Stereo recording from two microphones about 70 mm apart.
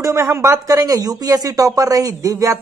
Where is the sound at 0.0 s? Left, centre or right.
Right.